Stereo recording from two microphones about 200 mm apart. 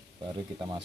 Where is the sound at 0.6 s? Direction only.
25° right (ahead or behind).